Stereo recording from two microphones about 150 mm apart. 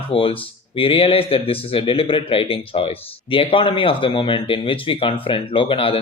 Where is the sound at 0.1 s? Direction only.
35° left (ahead or behind).